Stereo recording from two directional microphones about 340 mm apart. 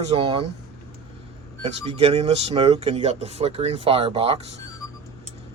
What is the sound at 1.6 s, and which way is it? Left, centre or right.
Speech, centre.